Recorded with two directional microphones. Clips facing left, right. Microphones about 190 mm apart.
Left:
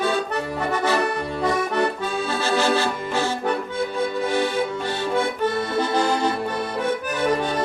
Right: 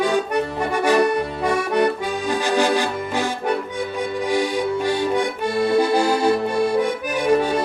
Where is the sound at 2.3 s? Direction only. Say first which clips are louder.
Right 2 dB; 15° right (ahead or behind).